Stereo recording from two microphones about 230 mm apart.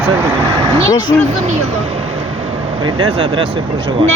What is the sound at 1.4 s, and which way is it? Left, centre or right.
Speech, right.